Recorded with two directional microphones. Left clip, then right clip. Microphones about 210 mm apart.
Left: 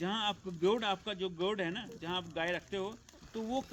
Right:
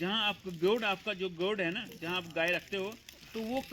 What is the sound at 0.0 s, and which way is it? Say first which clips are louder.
Speech: right 3 dB; 25° right (ahead or behind).